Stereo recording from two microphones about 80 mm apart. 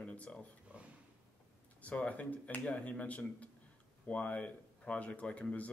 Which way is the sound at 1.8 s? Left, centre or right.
Centre.